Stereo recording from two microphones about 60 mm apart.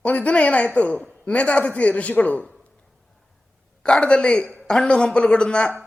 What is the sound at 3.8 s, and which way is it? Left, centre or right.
A man's voice, centre.